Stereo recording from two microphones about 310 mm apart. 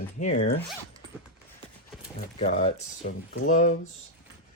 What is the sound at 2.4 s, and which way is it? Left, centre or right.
Speech, left.